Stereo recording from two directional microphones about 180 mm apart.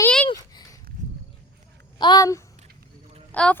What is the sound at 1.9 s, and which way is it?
Speech, 25° left (ahead or behind).